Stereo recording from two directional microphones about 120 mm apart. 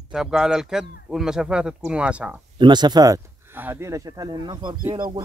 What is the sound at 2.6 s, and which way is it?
Speech, 35° right (ahead or behind).